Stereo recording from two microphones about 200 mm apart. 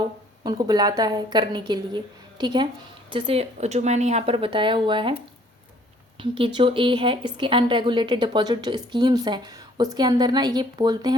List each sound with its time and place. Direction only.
0.4 s speech: 20° right (ahead or behind)
6.1 s speech: 25° right (ahead or behind)